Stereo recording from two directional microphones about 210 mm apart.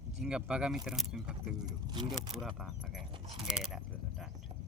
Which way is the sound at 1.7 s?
20° right (ahead or behind).